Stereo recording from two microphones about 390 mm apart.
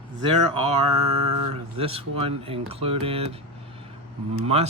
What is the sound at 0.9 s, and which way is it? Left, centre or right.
Mantra, right.